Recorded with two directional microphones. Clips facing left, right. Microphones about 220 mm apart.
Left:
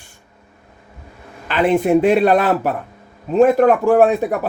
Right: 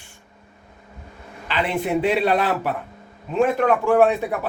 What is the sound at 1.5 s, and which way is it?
A man's voice, 50° left (ahead or behind).